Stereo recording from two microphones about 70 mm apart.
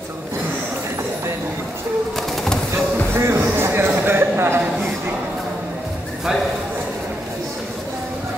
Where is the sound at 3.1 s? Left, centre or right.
Right.